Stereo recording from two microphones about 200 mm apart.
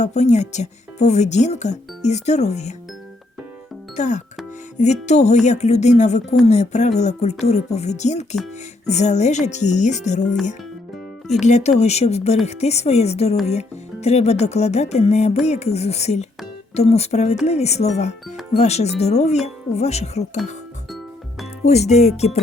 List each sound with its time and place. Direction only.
0.0 s speech: 35° left (ahead or behind)
3.9 s speech: 35° left (ahead or behind)
11.3 s speech: 35° left (ahead or behind)
21.6 s speech: 35° left (ahead or behind)